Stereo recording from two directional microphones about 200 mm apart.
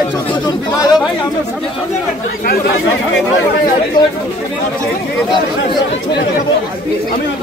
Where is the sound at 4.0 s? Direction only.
20° left (ahead or behind).